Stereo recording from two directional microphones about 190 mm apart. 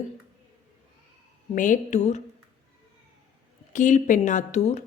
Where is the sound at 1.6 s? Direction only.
45° left (ahead or behind).